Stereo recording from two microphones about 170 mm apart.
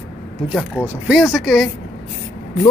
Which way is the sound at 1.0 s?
5° right (ahead or behind).